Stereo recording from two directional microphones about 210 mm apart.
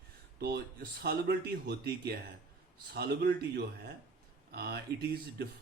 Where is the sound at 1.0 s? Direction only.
45° right (ahead or behind).